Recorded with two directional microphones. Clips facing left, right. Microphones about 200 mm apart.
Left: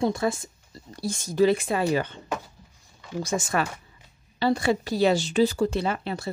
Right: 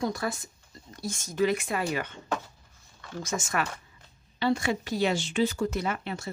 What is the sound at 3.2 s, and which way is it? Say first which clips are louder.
Speech: left 4 dB; 35° left (ahead or behind).